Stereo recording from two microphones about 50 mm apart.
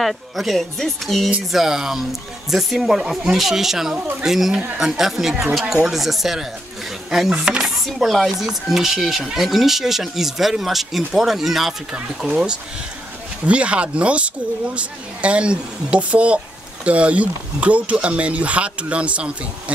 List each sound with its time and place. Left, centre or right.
0.0 s speech: centre
7.2 s speech: centre
7.6 s chopping: centre
8.4 s speech: centre
12.2 s speech: centre
13.5 s speech: right